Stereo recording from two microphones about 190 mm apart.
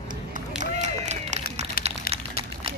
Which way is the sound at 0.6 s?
40° right (ahead or behind).